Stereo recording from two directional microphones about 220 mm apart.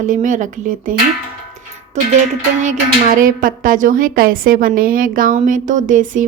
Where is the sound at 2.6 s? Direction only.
35° right (ahead or behind).